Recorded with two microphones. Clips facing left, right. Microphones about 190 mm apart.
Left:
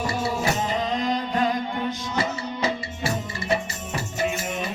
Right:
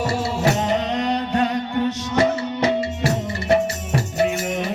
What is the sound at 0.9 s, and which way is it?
Music, 70° right (ahead or behind).